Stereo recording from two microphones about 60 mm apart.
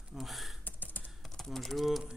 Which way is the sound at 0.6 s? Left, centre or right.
Left.